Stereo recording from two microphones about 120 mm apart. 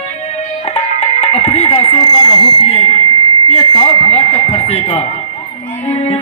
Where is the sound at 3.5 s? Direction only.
55° left (ahead or behind).